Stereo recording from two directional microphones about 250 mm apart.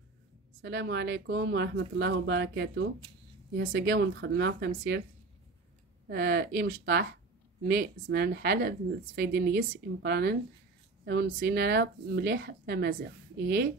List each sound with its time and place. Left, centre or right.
0.6 s speech: right
6.0 s a woman's voice: right